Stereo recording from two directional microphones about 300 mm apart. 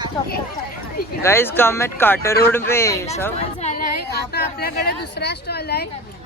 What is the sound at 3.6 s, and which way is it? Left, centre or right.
Speech, left.